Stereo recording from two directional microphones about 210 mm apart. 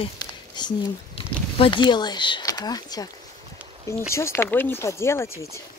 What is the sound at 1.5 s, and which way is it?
Speech, 25° left (ahead or behind).